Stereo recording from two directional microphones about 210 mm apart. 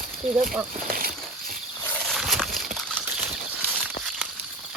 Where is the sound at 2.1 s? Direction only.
Centre (ahead or behind).